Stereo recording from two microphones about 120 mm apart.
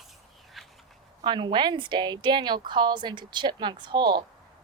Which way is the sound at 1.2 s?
40° right (ahead or behind).